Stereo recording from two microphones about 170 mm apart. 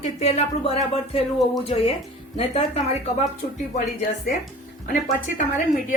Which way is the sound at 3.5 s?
45° left (ahead or behind).